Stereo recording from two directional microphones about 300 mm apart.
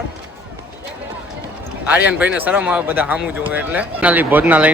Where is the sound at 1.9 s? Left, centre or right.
Centre.